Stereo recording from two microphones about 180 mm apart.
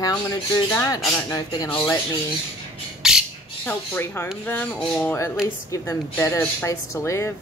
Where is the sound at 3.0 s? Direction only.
5° right (ahead or behind).